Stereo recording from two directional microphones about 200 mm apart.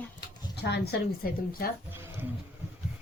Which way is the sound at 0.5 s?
55° left (ahead or behind).